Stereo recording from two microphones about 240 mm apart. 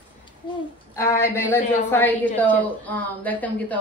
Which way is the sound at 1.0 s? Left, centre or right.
Centre.